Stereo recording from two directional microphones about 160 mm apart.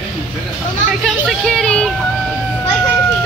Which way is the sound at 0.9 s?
Centre (ahead or behind).